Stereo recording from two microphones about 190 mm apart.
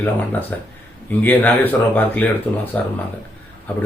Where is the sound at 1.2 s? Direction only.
10° left (ahead or behind).